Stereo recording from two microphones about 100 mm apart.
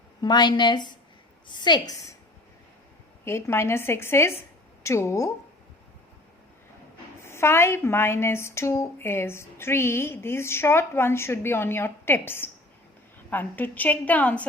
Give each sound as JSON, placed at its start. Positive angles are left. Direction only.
{"t": 0.2, "sound": "a woman's voice", "side_deg": 45}
{"t": 3.2, "sound": "a woman's voice", "side_deg": 25}
{"t": 7.3, "sound": "a woman's voice", "side_deg": 25}